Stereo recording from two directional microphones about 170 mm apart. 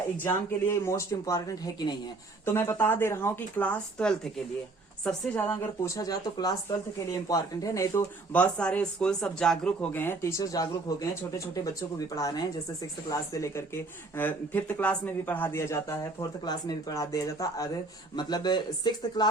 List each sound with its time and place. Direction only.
0.2 s speech: 15° left (ahead or behind)
2.4 s speech: 15° left (ahead or behind)